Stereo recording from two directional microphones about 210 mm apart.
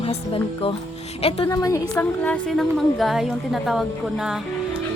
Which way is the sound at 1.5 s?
15° left (ahead or behind).